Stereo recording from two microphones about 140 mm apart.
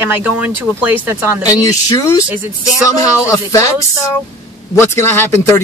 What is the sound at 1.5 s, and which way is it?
A man's voice, 25° left (ahead or behind).